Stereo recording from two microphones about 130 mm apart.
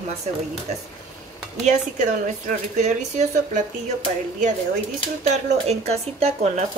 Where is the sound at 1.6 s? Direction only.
65° right (ahead or behind).